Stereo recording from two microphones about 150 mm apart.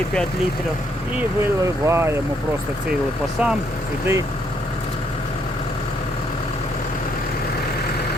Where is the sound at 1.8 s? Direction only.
20° right (ahead or behind).